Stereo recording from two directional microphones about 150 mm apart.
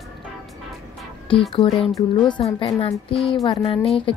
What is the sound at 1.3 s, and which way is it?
A woman's voice, 40° left (ahead or behind).